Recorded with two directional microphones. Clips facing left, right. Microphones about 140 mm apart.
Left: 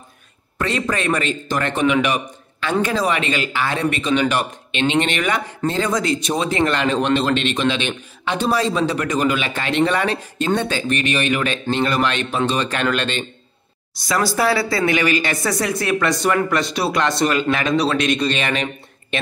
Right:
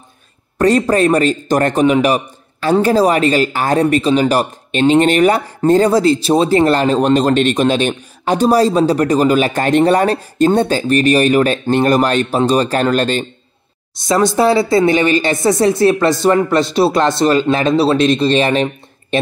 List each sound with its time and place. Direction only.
0.6 s a man's voice: 40° right (ahead or behind)
14.0 s speech: 25° right (ahead or behind)